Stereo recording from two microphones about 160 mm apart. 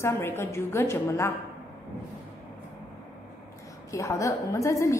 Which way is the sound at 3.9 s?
20° left (ahead or behind).